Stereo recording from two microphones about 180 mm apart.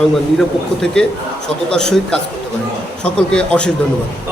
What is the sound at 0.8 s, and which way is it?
A man's voice, 5° left (ahead or behind).